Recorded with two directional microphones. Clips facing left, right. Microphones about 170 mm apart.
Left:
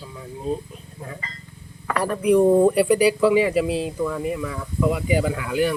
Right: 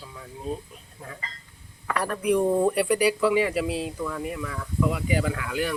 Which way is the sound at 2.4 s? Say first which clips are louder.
Left 7 dB; 15° left (ahead or behind).